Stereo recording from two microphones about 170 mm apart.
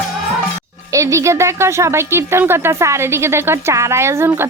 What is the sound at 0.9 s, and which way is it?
Speech, 20° right (ahead or behind).